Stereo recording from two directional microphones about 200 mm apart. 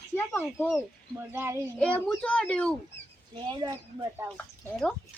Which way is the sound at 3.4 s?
25° right (ahead or behind).